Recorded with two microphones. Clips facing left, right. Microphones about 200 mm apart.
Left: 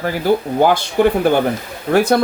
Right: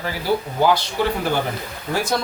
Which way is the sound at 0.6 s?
55° left (ahead or behind).